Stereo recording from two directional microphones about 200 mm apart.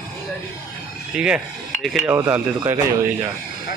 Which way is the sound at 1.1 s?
5° right (ahead or behind).